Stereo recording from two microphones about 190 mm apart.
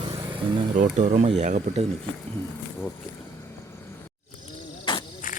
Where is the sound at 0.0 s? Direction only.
25° right (ahead or behind).